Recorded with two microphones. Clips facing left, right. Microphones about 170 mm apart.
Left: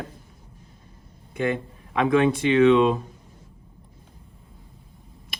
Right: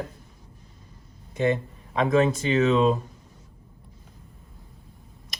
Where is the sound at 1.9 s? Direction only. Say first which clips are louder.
Left 1 dB; 40° right (ahead or behind).